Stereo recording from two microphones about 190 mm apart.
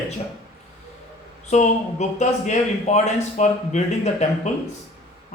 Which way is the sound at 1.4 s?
35° left (ahead or behind).